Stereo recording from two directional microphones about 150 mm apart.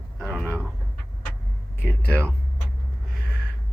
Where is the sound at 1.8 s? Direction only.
15° left (ahead or behind).